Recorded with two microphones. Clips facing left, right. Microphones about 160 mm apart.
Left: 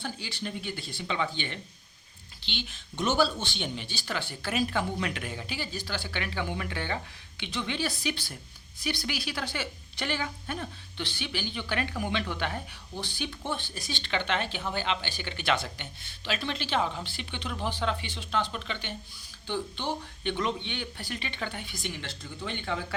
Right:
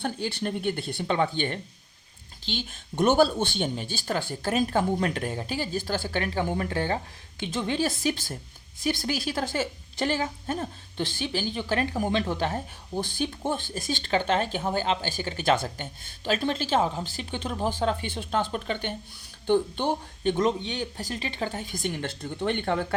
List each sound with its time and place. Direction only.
0.0 s a woman's voice: 55° right (ahead or behind)